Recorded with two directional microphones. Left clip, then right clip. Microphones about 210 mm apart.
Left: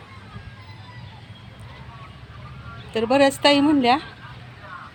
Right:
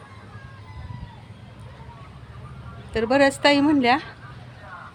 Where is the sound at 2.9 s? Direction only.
10° left (ahead or behind).